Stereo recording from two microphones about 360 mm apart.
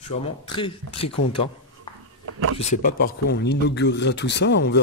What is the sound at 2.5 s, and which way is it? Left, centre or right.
Speech, left.